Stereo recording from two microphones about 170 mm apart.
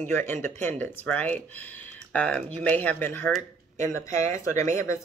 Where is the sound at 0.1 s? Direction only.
15° left (ahead or behind).